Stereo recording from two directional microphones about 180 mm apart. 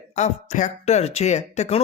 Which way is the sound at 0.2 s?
40° left (ahead or behind).